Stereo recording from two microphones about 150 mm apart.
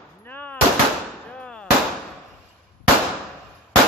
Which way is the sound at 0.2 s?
10° left (ahead or behind).